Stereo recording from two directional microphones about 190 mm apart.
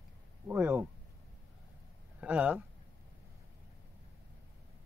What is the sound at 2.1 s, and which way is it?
Speech, 5° right (ahead or behind).